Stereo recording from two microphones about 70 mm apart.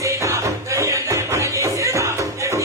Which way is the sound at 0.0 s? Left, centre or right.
Right.